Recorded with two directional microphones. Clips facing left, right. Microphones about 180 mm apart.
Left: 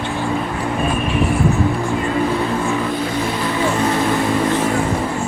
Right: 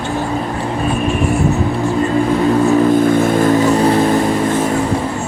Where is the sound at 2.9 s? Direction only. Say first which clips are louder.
Right 9 dB; 50° right (ahead or behind).